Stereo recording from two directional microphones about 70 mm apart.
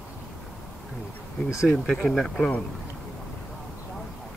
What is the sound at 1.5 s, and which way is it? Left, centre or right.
Speech, centre.